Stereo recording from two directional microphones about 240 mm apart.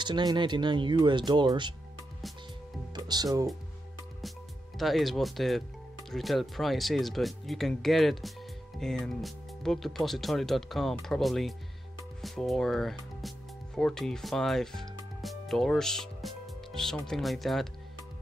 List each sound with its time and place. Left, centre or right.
0.0 s speech: centre
2.9 s speech: centre
4.7 s speech: centre